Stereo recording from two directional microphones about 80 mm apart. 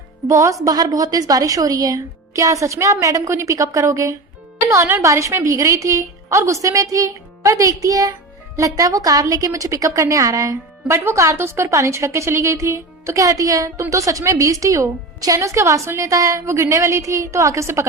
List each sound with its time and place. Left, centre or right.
0.3 s a woman's voice: right
0.6 s a woman's voice: right
10.8 s a woman's voice: right